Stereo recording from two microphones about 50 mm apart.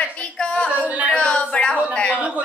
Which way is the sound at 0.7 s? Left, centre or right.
Right.